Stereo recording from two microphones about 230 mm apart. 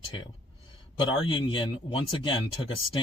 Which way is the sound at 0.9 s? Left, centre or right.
Left.